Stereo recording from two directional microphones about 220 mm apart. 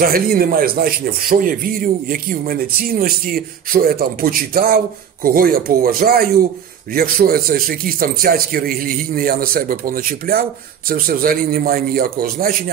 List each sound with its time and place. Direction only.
0.0 s a man's voice: 45° right (ahead or behind)